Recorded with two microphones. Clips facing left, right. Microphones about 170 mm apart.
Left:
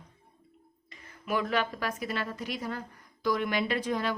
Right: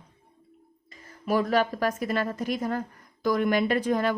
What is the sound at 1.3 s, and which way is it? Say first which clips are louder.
A woman's voice: right 6 dB; 40° right (ahead or behind).